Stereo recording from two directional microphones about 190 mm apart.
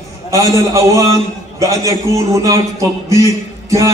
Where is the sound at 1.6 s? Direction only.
15° right (ahead or behind).